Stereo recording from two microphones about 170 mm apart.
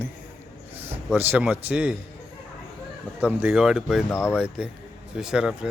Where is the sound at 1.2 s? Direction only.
10° right (ahead or behind).